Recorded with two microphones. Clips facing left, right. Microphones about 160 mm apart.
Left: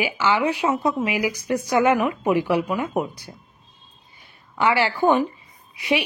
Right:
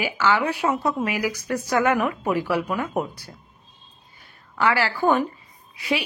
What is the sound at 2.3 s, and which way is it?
Speech, 15° left (ahead or behind).